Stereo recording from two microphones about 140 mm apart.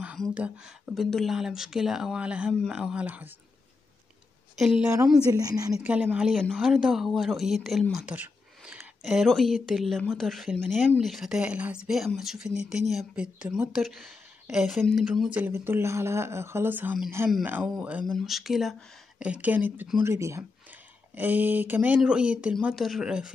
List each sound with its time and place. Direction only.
0.3 s speech: 5° right (ahead or behind)
4.6 s speech: centre (ahead or behind)
5.3 s a woman's voice: 25° right (ahead or behind)
5.8 s speech: 10° right (ahead or behind)